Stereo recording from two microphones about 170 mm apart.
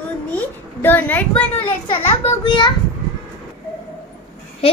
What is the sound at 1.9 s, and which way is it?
Speech, 30° left (ahead or behind).